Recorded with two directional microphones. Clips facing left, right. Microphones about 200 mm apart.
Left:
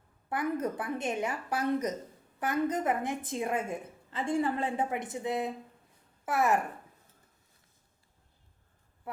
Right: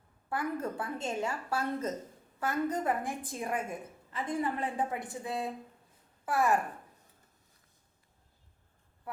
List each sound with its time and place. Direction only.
0.3 s a woman's voice: 20° left (ahead or behind)